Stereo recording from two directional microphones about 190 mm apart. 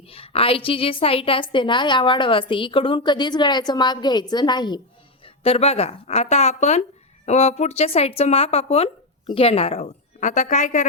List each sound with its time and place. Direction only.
0.1 s a woman's voice: 30° left (ahead or behind)